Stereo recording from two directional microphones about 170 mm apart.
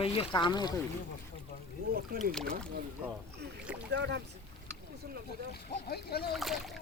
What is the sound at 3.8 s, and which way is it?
Speech, 90° right.